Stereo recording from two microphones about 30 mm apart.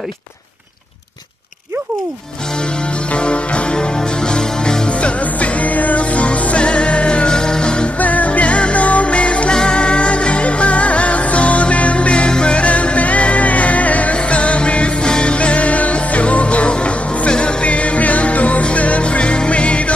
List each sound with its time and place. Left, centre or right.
3.1 s music: left
4.8 s music: left
5.6 s music: left
6.1 s music: left
7.2 s music: left
8.0 s music: left
9.5 s music: left
12.5 s music: left
14.1 s music: left
15.0 s music: left
15.3 s music: left